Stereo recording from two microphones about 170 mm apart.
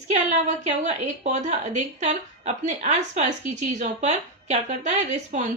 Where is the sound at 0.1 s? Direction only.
45° right (ahead or behind).